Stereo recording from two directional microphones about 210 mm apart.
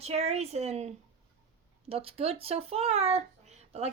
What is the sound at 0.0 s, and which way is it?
Speech, 30° right (ahead or behind).